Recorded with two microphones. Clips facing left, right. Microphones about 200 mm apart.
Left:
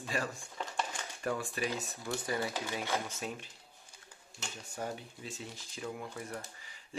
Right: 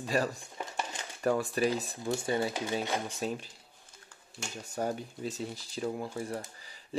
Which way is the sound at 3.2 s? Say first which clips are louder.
Right 6 dB; 35° right (ahead or behind).